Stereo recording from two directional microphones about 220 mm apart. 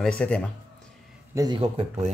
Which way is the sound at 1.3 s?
20° right (ahead or behind).